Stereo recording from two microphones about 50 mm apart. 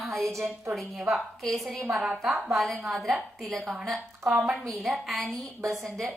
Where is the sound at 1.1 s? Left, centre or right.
Centre.